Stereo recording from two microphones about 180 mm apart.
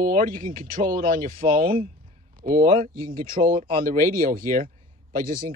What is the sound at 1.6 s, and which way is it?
Speech, 30° right (ahead or behind).